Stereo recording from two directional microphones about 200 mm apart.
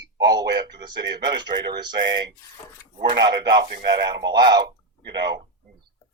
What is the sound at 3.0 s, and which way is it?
Speech, 20° right (ahead or behind).